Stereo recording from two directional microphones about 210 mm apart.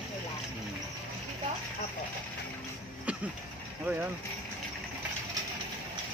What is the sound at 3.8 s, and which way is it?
Speech, 10° right (ahead or behind).